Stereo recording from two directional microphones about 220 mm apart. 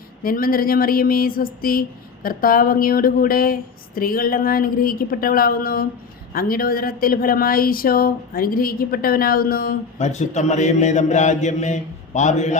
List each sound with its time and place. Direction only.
0.2 s speech: 40° left (ahead or behind)